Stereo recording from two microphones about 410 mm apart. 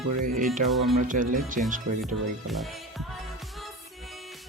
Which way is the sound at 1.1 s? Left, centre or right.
Centre.